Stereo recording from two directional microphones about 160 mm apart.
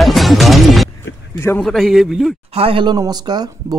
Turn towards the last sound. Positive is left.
turn(degrees=-25)  # may be behind; listen again after turning